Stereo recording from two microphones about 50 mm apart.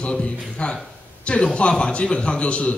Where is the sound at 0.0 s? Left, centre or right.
Left.